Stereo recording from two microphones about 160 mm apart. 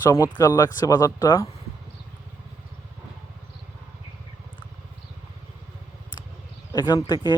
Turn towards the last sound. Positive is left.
turn(degrees=25)  # may be behind; listen again after turning